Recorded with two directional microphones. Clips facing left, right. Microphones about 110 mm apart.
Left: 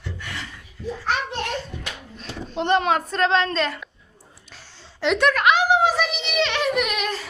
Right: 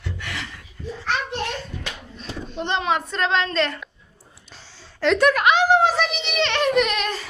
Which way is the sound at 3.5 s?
15° left (ahead or behind).